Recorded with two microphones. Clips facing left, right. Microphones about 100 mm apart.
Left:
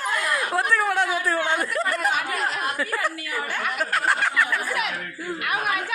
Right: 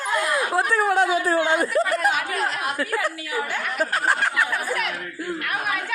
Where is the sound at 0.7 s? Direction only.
25° right (ahead or behind).